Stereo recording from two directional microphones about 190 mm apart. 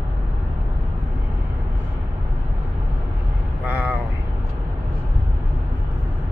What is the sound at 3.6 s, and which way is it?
Vehicle, 10° right (ahead or behind).